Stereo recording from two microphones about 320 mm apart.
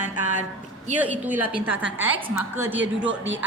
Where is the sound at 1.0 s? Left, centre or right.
Centre.